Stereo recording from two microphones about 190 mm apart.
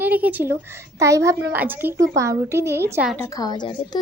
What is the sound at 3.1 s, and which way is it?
Speech, 15° left (ahead or behind).